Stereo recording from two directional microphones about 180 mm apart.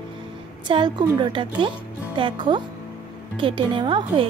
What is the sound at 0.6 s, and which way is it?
Speech, 25° right (ahead or behind).